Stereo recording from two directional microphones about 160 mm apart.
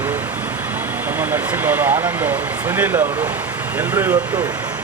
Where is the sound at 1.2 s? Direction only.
10° right (ahead or behind).